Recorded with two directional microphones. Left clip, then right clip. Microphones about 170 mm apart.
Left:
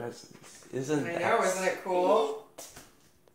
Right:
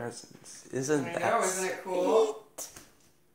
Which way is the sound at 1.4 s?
30° right (ahead or behind).